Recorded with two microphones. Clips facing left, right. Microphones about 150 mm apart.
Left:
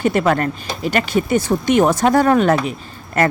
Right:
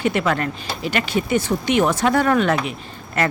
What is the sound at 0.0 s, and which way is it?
A woman's voice, 45° left (ahead or behind).